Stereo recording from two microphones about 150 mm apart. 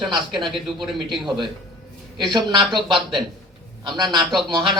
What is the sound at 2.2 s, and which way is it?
Speech, 30° right (ahead or behind).